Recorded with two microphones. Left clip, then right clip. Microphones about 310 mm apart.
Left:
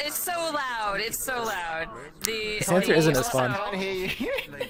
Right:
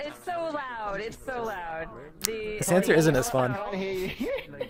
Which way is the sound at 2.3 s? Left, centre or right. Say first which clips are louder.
Left 5 dB; left.